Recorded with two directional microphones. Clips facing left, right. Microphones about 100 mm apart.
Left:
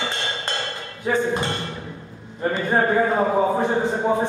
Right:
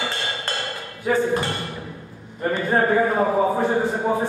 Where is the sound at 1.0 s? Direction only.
20° left (ahead or behind).